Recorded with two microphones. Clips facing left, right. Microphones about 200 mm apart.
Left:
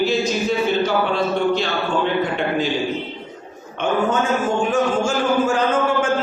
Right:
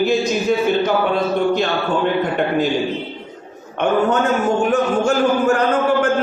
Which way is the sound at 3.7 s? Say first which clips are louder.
Right 3 dB; 65° right (ahead or behind).